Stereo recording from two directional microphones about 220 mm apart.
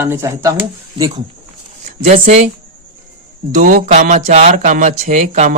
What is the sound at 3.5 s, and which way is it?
Speech, 35° right (ahead or behind).